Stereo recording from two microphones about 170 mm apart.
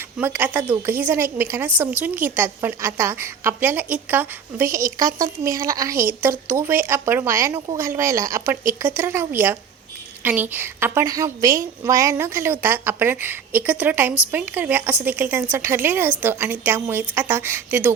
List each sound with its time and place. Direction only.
0.2 s a woman's voice: 10° right (ahead or behind)